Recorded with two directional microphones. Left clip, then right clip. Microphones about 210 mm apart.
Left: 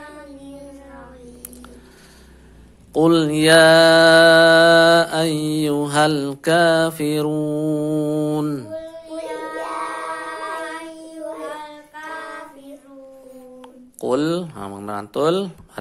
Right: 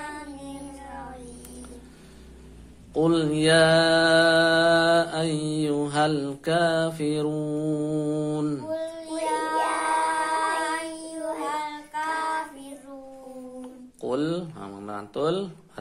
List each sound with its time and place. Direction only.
2.9 s mantra: 30° left (ahead or behind)
9.9 s child singing: 45° right (ahead or behind)
13.6 s mantra: 30° left (ahead or behind)